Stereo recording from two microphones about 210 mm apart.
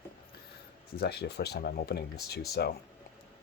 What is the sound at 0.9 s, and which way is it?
Speech, 50° left (ahead or behind).